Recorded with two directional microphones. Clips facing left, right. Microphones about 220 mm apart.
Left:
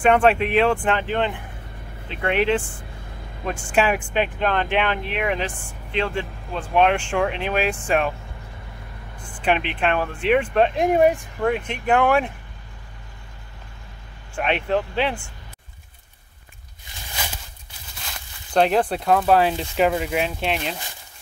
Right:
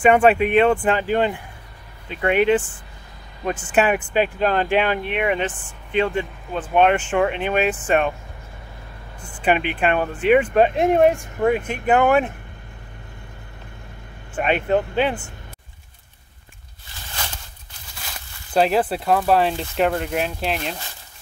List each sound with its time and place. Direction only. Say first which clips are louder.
0.0 s speech: right 2 dB; 5° right (ahead or behind)
2.0 s speech: right 3 dB; centre (ahead or behind)
3.6 s speech: right 1 dB; 5° right (ahead or behind)
4.4 s speech: right 3 dB; 40° right (ahead or behind)
5.0 s speech: right 3 dB; centre (ahead or behind)
5.5 s speech: left 3 dB; 10° left (ahead or behind)
5.9 s speech: right 4 dB; 5° right (ahead or behind)
9.2 s speech: right 2 dB; 5° right (ahead or behind)
14.3 s speech: right 3 dB; centre (ahead or behind)
17.1 s walk: left 1 dB; 10° left (ahead or behind)
18.5 s speech: even; 5° right (ahead or behind)